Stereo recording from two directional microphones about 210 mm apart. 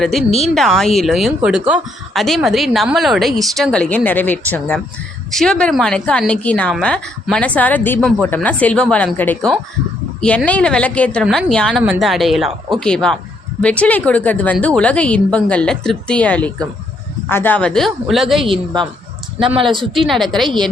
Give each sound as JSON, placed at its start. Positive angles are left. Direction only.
{"t": 0.0, "sound": "speech", "side_deg": 0}
{"t": 18.4, "sound": "a woman's voice", "side_deg": -25}
{"t": 19.9, "sound": "speech", "side_deg": 0}